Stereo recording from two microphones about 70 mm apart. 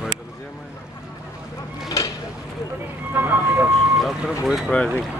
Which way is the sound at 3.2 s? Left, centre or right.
Right.